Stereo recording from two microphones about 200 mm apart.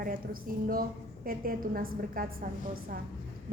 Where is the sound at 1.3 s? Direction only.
45° right (ahead or behind).